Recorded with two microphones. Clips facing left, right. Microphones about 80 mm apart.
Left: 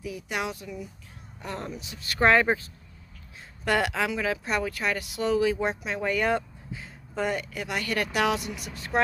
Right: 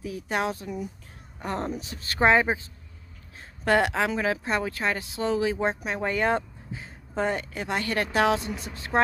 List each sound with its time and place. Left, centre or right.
0.0 s speech: right
2.1 s speech: centre